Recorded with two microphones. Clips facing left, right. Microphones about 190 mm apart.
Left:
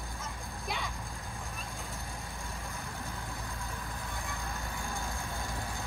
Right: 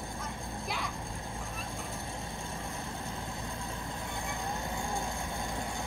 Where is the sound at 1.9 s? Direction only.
15° right (ahead or behind).